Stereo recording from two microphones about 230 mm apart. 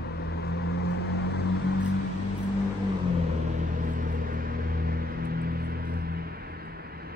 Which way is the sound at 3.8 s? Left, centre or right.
Right.